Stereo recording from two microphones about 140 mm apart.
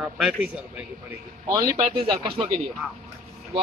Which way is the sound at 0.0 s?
5° right (ahead or behind).